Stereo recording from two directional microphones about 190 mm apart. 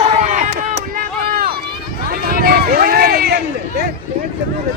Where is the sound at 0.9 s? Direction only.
50° right (ahead or behind).